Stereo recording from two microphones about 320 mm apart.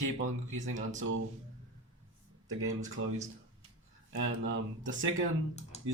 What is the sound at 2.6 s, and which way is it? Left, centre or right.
Speech, right.